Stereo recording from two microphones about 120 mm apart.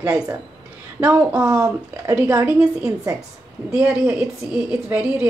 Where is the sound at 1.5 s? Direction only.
30° right (ahead or behind).